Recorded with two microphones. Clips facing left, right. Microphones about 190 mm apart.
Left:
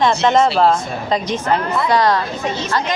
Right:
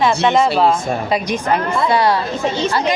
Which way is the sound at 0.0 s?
Centre (ahead or behind).